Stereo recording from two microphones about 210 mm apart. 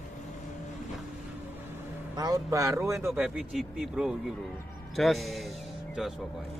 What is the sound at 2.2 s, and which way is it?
A man's voice, 15° right (ahead or behind).